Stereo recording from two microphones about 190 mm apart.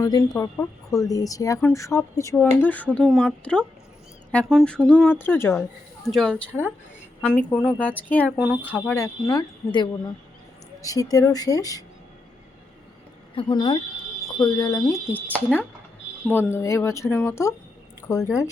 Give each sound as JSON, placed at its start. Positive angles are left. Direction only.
{"t": 0.0, "sound": "speech", "side_deg": 15}
{"t": 8.4, "sound": "speech", "side_deg": -10}
{"t": 9.0, "sound": "speech", "side_deg": 15}
{"t": 13.3, "sound": "speech", "side_deg": 25}
{"t": 16.3, "sound": "speech", "side_deg": 10}